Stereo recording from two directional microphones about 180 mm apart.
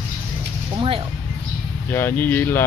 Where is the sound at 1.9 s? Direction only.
10° left (ahead or behind).